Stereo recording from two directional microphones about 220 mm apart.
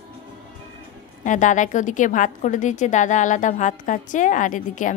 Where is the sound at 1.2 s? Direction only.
35° left (ahead or behind).